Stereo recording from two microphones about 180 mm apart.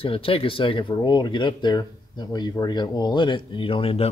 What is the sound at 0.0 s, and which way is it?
Speech, 30° left (ahead or behind).